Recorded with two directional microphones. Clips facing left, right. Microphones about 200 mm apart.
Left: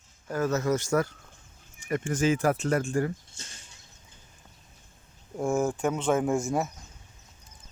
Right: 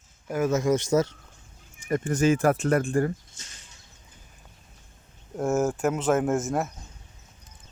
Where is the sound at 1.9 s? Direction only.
40° right (ahead or behind).